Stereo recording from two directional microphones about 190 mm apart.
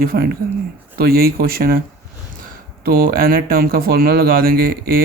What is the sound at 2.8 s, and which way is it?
Speech, 50° right (ahead or behind).